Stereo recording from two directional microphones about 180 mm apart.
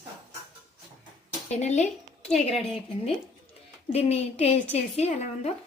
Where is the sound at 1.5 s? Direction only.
40° left (ahead or behind).